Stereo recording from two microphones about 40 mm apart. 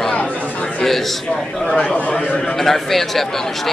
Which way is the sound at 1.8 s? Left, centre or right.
Left.